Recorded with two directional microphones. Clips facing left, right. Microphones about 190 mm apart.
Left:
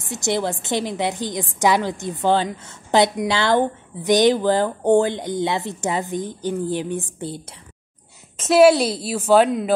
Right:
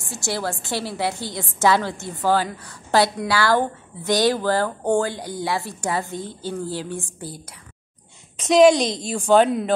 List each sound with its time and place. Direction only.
0.0 s a woman's voice: 20° left (ahead or behind)
8.5 s a woman's voice: 5° left (ahead or behind)